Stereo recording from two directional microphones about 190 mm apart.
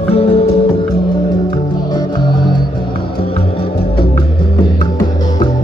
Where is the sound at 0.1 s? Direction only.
30° left (ahead or behind).